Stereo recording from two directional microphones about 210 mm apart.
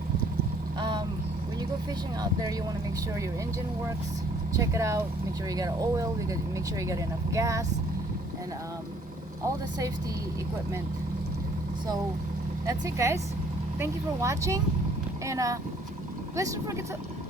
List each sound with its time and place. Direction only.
0.8 s vehicle: 20° right (ahead or behind)
2.2 s speech: 15° right (ahead or behind)
4.5 s speech: 15° right (ahead or behind)
9.4 s speech: 15° right (ahead or behind)
12.6 s speech: 15° right (ahead or behind)